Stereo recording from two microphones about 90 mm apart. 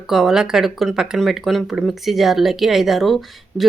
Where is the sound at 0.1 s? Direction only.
5° right (ahead or behind).